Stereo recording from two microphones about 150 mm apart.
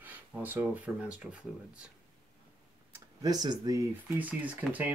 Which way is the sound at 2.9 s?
25° right (ahead or behind).